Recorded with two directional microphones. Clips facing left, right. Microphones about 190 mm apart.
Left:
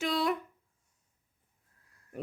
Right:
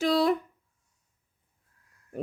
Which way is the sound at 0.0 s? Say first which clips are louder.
Right 7 dB; 35° right (ahead or behind).